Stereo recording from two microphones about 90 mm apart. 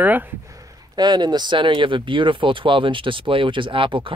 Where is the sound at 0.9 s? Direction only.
50° right (ahead or behind).